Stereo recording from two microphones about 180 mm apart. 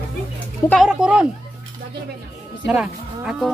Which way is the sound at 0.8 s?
5° right (ahead or behind).